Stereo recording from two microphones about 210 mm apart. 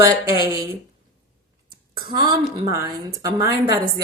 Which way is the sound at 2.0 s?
20° right (ahead or behind).